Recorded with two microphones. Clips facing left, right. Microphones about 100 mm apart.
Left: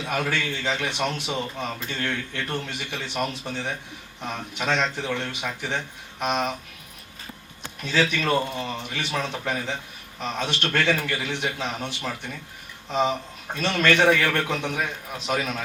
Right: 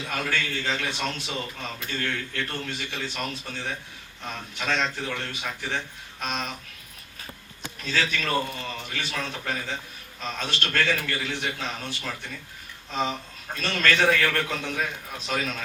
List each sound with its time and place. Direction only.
0.1 s a man's voice: 20° left (ahead or behind)
7.8 s a man's voice: 20° left (ahead or behind)
13.6 s a man's voice: 20° left (ahead or behind)